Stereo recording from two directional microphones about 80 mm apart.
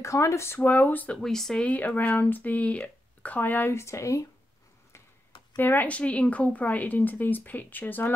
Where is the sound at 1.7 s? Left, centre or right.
Centre; by 4.2 s left.